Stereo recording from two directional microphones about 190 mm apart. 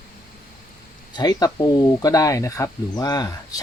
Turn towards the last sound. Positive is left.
turn(degrees=20)  # may be behind; listen again after turning